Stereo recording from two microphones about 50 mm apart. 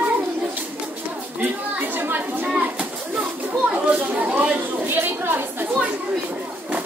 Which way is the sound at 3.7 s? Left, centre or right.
Right.